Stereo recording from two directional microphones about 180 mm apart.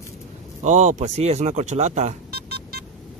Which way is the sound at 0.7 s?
40° right (ahead or behind).